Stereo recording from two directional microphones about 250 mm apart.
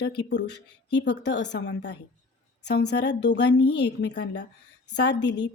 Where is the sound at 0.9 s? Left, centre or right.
Left.